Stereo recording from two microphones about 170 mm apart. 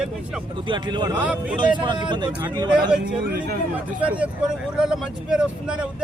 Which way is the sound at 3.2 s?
70° right (ahead or behind).